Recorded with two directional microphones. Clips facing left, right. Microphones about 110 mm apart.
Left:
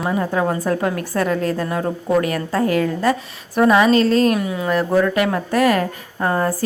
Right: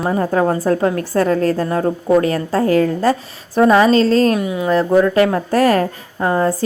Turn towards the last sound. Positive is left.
turn(degrees=-20)  # may be behind; listen again after turning